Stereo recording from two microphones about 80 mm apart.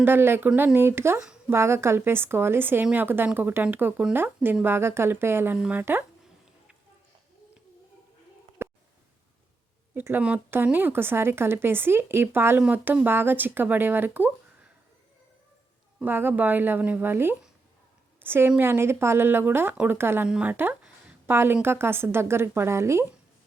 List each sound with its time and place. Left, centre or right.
0.0 s speech: right
8.6 s a sound: right
9.9 s speech: right
16.0 s a woman's voice: right
20.2 s a woman's voice: centre; by 23.0 s right